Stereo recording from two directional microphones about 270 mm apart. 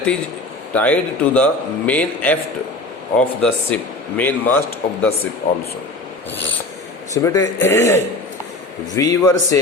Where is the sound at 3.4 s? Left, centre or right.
Centre.